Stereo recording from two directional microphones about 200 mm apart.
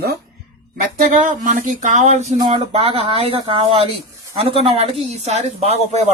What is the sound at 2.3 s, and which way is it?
Speech, 25° right (ahead or behind).